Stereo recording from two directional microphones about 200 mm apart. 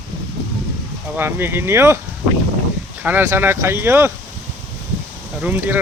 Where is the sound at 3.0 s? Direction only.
10° right (ahead or behind).